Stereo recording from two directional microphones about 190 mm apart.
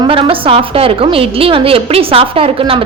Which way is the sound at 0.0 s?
30° right (ahead or behind).